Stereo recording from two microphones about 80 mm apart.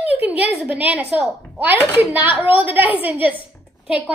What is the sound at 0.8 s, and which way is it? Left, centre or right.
Speech, centre.